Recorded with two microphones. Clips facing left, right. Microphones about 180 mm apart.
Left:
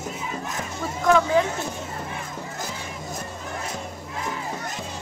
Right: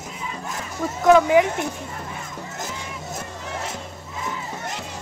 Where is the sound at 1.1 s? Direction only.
15° right (ahead or behind).